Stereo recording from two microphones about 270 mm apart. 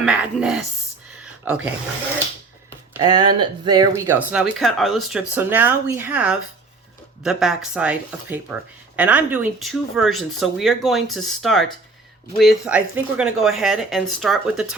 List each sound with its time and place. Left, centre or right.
0.0 s speech: centre
1.2 s a sound: centre
3.2 s speech: right
3.4 s speech: centre